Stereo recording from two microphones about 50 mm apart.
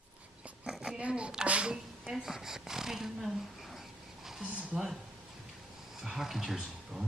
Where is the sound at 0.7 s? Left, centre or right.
Centre.